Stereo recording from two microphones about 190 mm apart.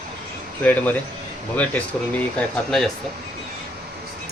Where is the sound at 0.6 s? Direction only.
10° left (ahead or behind).